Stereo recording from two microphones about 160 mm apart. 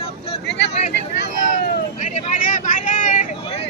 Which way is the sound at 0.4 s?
90° left.